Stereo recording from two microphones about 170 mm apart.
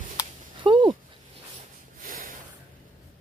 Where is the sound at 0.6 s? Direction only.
30° right (ahead or behind).